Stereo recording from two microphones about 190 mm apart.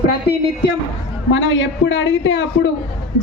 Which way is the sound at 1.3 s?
90° left.